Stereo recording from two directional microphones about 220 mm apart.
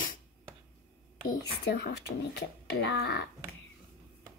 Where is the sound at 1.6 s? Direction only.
50° left (ahead or behind).